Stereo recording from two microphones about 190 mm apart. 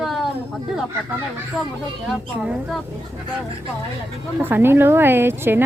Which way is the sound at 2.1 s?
Centre (ahead or behind).